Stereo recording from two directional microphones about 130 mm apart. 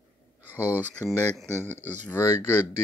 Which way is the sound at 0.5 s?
15° left (ahead or behind).